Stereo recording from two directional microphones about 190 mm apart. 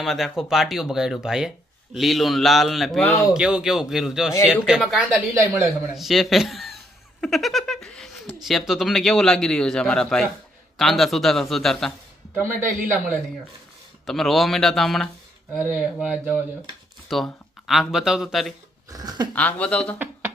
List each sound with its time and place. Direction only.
0.0 s speech: centre (ahead or behind)
3.3 s speech: 5° right (ahead or behind)
5.3 s speech: 15° right (ahead or behind)
5.9 s speech: centre (ahead or behind)
7.2 s a sound: centre (ahead or behind)
8.4 s speech: centre (ahead or behind)
12.3 s a man's voice: 10° right (ahead or behind)
14.1 s speech: centre (ahead or behind)
18.9 s speech: 20° right (ahead or behind)
19.3 s speech: 10° left (ahead or behind)